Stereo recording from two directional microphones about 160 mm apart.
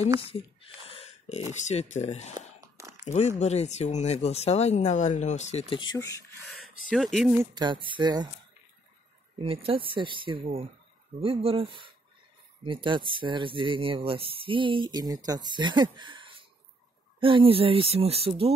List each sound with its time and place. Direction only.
0.2 s a sound: 35° left (ahead or behind)
1.5 s speech: 45° left (ahead or behind)
2.3 s a sound: 20° right (ahead or behind)
3.3 s speech: 45° left (ahead or behind)
5.8 s speech: 25° left (ahead or behind)
6.5 s speech: centre (ahead or behind)
7.3 s speech: 30° right (ahead or behind)
9.4 s speech: 35° right (ahead or behind)